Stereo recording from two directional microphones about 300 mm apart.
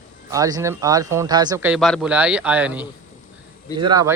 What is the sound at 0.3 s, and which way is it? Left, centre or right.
Speech, centre.